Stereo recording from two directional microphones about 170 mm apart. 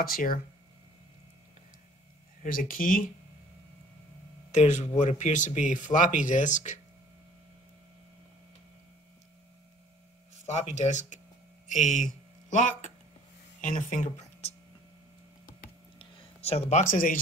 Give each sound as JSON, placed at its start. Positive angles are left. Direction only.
{"t": 0.0, "sound": "speech", "side_deg": 60}
{"t": 2.4, "sound": "speech", "side_deg": 55}
{"t": 4.5, "sound": "speech", "side_deg": 45}
{"t": 10.4, "sound": "speech", "side_deg": 40}
{"t": 16.0, "sound": "a sound", "side_deg": 35}
{"t": 16.8, "sound": "speech", "side_deg": 55}